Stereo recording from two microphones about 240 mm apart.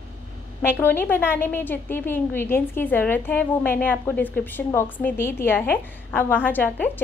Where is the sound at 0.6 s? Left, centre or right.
Centre.